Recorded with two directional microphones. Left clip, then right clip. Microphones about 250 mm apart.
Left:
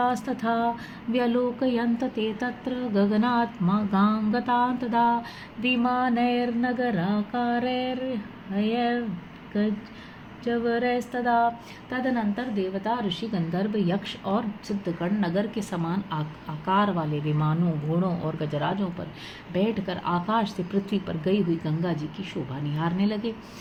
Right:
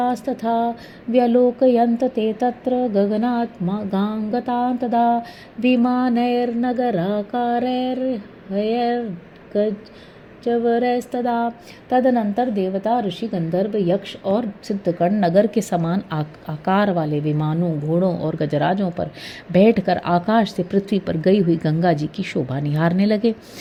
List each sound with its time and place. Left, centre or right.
0.0 s a woman's voice: centre
10.4 s a woman's voice: right